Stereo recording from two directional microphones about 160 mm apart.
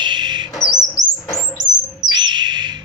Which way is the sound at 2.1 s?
30° right (ahead or behind).